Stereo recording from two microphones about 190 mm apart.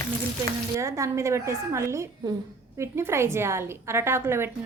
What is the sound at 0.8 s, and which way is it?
A woman's voice, 15° right (ahead or behind).